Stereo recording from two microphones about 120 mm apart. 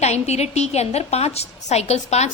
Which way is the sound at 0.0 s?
65° left (ahead or behind).